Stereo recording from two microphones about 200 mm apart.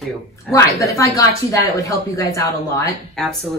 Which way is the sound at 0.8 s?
15° left (ahead or behind).